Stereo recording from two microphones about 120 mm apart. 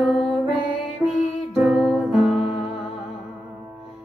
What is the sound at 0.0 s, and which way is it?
Music, centre (ahead or behind).